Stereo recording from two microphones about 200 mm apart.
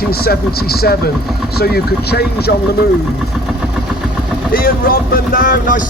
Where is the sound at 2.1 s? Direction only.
50° left (ahead or behind).